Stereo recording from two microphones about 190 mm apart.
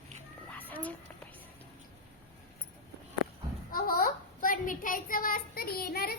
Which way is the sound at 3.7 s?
50° left (ahead or behind).